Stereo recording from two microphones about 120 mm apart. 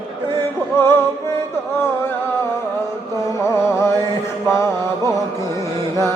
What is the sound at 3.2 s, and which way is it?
Music, 25° left (ahead or behind).